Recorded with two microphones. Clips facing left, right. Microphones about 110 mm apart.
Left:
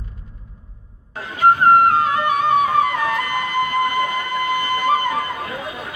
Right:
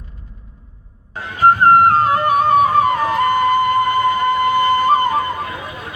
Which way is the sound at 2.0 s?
40° right (ahead or behind).